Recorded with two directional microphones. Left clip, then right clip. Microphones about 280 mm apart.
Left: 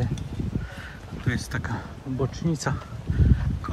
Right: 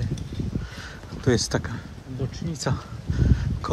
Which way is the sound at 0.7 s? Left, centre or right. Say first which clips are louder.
Right 1 dB; centre.